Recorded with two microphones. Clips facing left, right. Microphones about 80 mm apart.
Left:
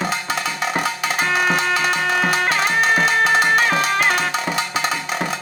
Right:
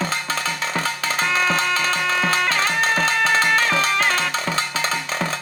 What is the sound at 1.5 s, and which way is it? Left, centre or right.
Music, left.